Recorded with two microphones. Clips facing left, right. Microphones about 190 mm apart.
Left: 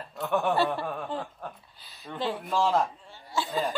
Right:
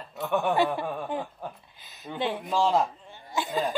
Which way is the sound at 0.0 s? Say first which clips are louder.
Even; centre (ahead or behind).